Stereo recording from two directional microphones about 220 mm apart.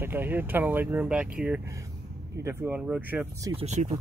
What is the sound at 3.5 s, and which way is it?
Speech, 30° right (ahead or behind).